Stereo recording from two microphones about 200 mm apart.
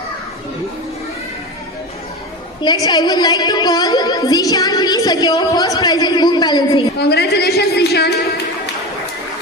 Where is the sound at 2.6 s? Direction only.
20° left (ahead or behind).